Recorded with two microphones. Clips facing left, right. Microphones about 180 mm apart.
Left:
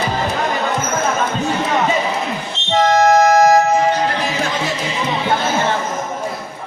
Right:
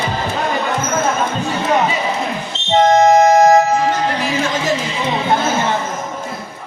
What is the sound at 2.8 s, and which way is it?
Music, 20° right (ahead or behind).